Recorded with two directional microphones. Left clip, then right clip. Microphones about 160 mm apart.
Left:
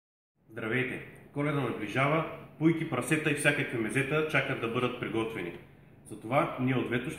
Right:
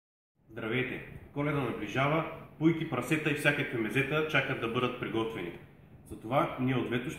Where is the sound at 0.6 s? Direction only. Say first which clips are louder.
Left 2 dB; centre (ahead or behind).